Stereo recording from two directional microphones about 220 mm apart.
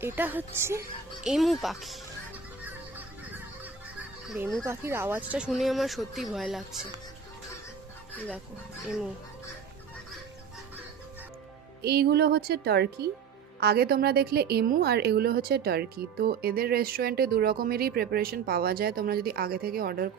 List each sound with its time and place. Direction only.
0.0 s a child's voice: 10° right (ahead or behind)
4.3 s a child's voice: centre (ahead or behind)
4.6 s a child's voice: 10° right (ahead or behind)
11.8 s a woman's voice: 45° right (ahead or behind)